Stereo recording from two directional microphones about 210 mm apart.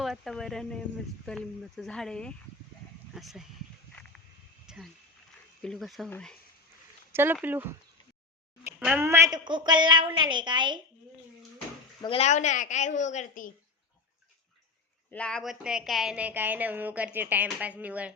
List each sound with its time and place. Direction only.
0.0 s speech: centre (ahead or behind)
4.6 s wild animals: 5° right (ahead or behind)
5.6 s speech: centre (ahead or behind)
7.1 s a woman's voice: 10° right (ahead or behind)
12.0 s a woman's voice: 30° left (ahead or behind)
15.1 s a woman's voice: 5° left (ahead or behind)